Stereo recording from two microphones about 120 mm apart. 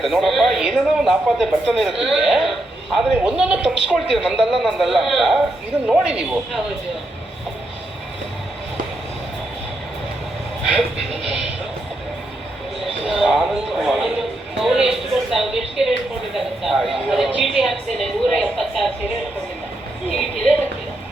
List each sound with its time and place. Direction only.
0.0 s speech: centre (ahead or behind)
10.8 s speech: 60° right (ahead or behind)
13.1 s speech: 5° right (ahead or behind)